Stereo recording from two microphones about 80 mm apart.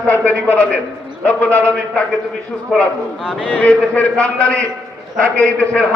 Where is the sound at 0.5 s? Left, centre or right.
Centre.